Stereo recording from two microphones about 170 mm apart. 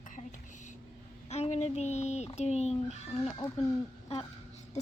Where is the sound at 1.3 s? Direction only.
40° left (ahead or behind).